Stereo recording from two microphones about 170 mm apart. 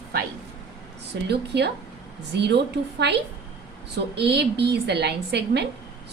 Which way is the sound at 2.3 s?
90° right.